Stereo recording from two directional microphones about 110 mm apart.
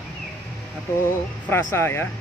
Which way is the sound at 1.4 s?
20° left (ahead or behind).